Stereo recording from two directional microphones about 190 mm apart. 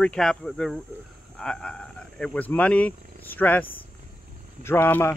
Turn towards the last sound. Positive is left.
turn(degrees=10)  # may be behind; listen again after turning